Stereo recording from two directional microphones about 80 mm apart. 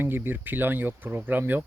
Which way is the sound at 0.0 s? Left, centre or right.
Right.